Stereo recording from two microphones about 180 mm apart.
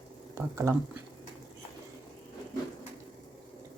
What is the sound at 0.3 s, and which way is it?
Speech, 15° right (ahead or behind).